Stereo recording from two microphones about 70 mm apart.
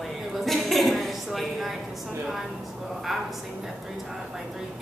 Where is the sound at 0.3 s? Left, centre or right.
Centre.